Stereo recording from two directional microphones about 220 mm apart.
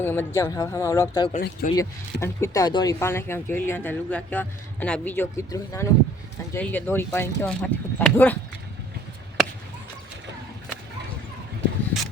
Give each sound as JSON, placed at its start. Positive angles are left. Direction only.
{"t": 0.0, "sound": "speech", "side_deg": 10}
{"t": 1.3, "sound": "speech", "side_deg": 35}
{"t": 1.7, "sound": "speech", "side_deg": 15}